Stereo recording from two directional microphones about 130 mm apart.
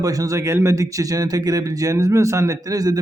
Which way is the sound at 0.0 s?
25° right (ahead or behind).